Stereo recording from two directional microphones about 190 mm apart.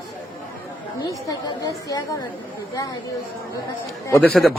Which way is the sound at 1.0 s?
20° left (ahead or behind).